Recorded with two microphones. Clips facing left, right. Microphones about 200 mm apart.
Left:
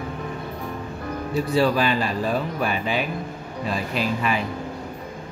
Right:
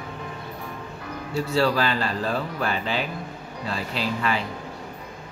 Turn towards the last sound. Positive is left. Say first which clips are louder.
# left 2 dB
turn(degrees=15)  # may be behind; listen again after turning